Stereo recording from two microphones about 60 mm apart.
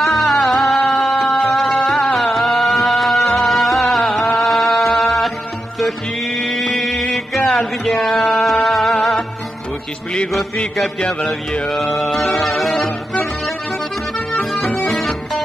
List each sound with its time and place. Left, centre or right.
0.0 s music: centre
6.8 s music: centre
7.4 s music: centre
7.9 s music: centre
11.0 s speech: centre
11.7 s music: centre
14.3 s music: centre